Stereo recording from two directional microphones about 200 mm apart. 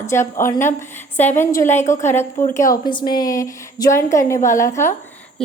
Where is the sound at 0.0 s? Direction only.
15° left (ahead or behind).